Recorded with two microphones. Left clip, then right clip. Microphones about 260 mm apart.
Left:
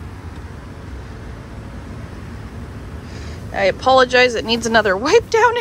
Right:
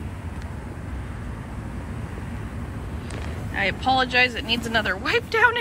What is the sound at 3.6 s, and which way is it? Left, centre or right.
Speech, left.